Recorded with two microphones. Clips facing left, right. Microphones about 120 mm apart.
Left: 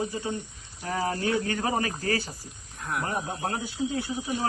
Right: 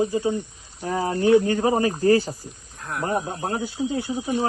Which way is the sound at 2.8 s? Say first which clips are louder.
Even; centre (ahead or behind).